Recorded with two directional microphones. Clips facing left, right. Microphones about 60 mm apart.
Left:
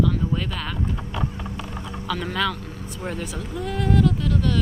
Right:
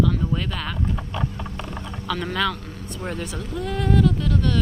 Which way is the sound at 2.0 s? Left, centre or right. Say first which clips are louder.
Right 1 dB; centre.